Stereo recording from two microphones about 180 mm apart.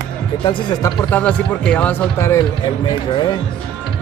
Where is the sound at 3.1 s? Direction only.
25° left (ahead or behind).